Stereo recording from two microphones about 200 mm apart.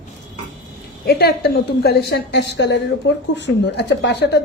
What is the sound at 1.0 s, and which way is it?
A woman's voice, 50° left (ahead or behind).